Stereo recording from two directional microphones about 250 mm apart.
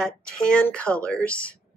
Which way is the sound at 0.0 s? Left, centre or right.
Centre.